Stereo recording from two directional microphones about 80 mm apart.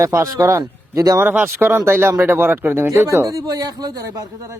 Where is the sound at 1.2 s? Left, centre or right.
Right.